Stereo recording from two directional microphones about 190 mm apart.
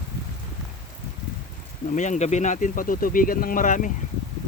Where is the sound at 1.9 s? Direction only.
40° left (ahead or behind).